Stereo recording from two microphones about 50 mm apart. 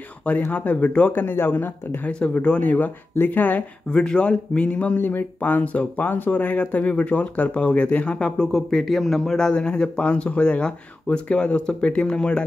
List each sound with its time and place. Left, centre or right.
0.5 s speech: left
1.2 s speech: left
2.0 s speech: left
2.6 s speech: left
4.0 s speech: left
4.9 s speech: left
8.5 s a man's voice: centre